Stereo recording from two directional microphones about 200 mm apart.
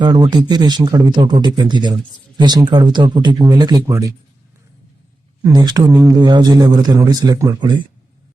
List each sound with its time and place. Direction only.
0.0 s speech: 20° right (ahead or behind)
5.4 s speech: 20° right (ahead or behind)